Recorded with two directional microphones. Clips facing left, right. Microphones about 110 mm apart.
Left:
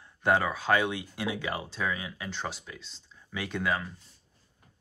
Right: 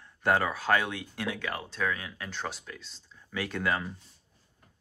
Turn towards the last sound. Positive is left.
turn(degrees=0)  # may be behind; listen again after turning